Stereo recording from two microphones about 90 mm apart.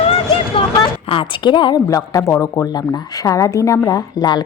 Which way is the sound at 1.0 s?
80° left.